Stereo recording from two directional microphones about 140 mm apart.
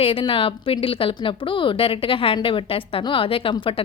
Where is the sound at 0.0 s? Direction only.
40° left (ahead or behind).